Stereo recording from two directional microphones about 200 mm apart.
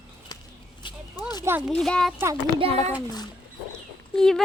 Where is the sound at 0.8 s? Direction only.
25° left (ahead or behind).